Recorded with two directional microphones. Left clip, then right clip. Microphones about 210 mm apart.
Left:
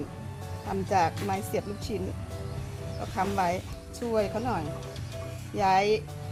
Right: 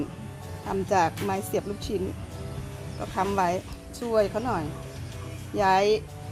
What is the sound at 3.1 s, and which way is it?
A woman's voice, 30° right (ahead or behind).